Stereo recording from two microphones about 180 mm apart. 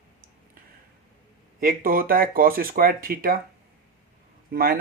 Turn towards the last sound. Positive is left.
turn(degrees=-55)  # may be behind; listen again after turning